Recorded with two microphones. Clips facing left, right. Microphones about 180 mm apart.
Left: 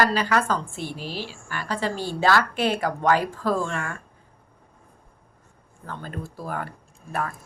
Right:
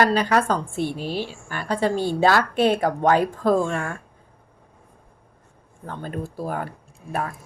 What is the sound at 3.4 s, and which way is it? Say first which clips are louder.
Speech: right 5 dB; 50° right (ahead or behind).